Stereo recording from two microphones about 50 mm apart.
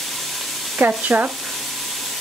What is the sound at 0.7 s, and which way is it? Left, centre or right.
Speech, right.